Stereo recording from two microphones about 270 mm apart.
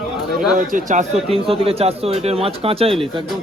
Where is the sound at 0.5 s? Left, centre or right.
Right.